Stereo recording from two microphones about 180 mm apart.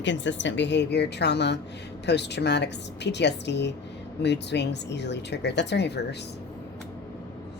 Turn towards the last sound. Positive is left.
turn(degrees=70)  # may be behind; listen again after turning